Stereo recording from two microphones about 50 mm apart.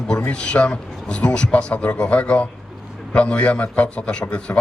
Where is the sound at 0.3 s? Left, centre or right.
Centre.